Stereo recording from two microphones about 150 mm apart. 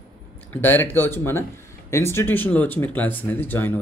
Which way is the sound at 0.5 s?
15° left (ahead or behind).